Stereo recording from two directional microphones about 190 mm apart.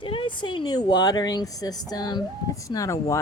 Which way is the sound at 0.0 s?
25° left (ahead or behind).